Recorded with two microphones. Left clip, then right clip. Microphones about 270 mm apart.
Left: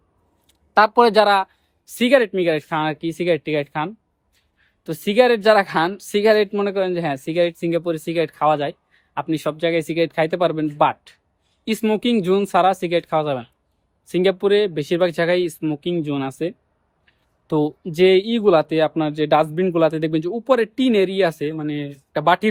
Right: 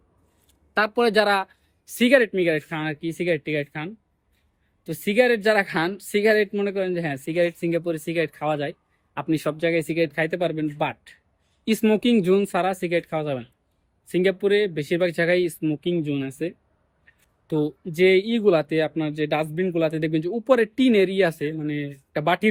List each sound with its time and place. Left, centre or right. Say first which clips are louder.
0.7 s speech: left 7 dB; centre
11.6 s speech: left 1 dB; centre